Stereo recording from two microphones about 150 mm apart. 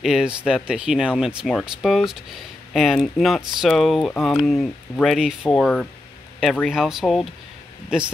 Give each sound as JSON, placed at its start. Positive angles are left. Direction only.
{"t": 0.0, "sound": "speech", "side_deg": -5}